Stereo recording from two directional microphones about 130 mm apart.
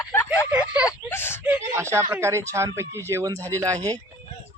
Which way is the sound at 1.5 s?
20° right (ahead or behind).